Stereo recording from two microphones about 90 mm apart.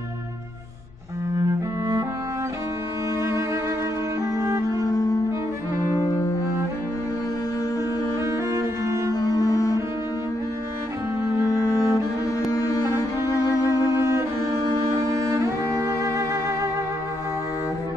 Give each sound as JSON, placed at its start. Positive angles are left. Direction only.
{"t": 4.5, "sound": "music", "side_deg": -35}
{"t": 4.8, "sound": "cello", "side_deg": 40}
{"t": 5.9, "sound": "music", "side_deg": 40}
{"t": 8.3, "sound": "cello", "side_deg": -35}
{"t": 9.1, "sound": "cello", "side_deg": 45}
{"t": 11.9, "sound": "cello", "side_deg": 40}
{"t": 13.3, "sound": "music", "side_deg": 40}
{"t": 15.1, "sound": "cello", "side_deg": -35}